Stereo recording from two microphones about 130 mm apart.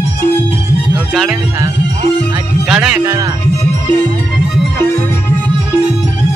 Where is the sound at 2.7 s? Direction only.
5° right (ahead or behind).